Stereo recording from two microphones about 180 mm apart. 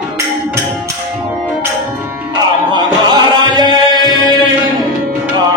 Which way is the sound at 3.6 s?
25° left (ahead or behind).